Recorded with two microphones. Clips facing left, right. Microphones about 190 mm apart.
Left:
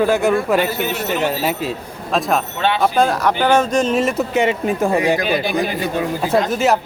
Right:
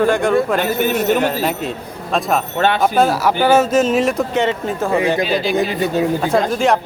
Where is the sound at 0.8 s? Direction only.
50° right (ahead or behind).